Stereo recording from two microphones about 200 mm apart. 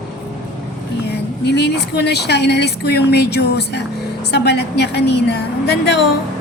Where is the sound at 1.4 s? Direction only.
55° left (ahead or behind).